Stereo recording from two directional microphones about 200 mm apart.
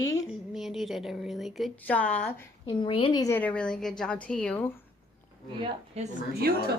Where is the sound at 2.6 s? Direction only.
25° left (ahead or behind); by 4.7 s 5° left (ahead or behind).